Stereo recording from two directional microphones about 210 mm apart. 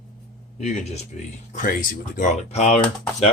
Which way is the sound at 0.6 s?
30° left (ahead or behind).